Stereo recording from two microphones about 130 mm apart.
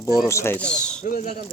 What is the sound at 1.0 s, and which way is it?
Speech, 90° left.